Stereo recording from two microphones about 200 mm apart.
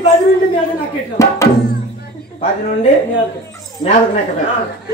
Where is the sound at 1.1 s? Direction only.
15° left (ahead or behind).